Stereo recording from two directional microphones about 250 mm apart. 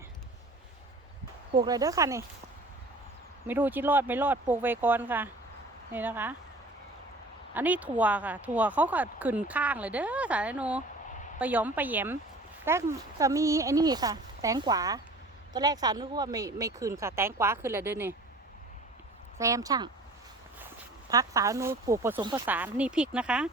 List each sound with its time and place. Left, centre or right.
1.5 s speech: centre
3.4 s speech: centre
7.5 s speech: centre
19.4 s speech: centre
21.1 s speech: centre